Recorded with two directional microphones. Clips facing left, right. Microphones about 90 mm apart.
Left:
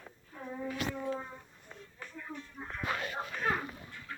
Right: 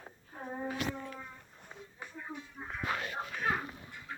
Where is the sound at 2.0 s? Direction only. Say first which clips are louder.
Even; 20° right (ahead or behind).